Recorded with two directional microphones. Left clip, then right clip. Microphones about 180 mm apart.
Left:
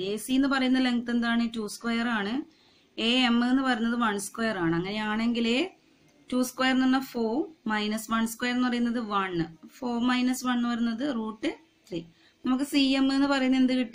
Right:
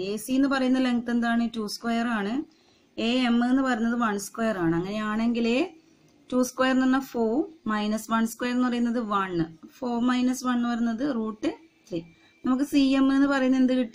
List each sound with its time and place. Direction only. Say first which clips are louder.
0.0 s speech: right 1 dB; 50° right (ahead or behind)